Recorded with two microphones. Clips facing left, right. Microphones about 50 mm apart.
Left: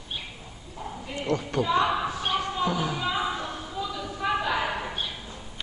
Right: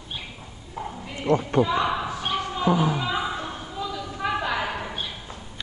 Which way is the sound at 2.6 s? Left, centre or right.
Right.